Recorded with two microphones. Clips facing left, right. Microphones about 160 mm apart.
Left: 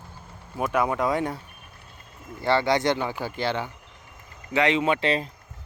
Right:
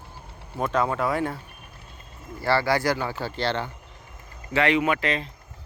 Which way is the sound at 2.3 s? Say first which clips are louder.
Left 1 dB; 20° left (ahead or behind).